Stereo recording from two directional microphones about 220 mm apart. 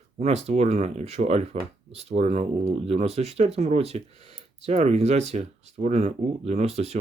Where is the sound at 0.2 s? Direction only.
30° right (ahead or behind).